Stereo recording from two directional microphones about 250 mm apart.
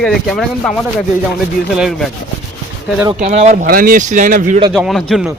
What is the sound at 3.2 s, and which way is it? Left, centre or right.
A man's voice, right.